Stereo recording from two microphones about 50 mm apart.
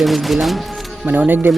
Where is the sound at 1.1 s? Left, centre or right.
Right.